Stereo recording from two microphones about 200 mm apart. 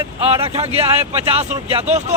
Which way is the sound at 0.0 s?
20° right (ahead or behind).